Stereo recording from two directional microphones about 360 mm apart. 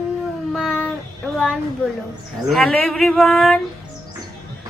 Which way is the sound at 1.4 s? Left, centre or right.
Centre.